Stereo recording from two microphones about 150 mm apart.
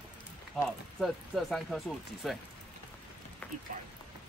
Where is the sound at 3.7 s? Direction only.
60° right (ahead or behind).